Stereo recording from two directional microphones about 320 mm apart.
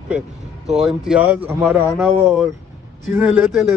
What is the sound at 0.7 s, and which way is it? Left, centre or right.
Speech, centre.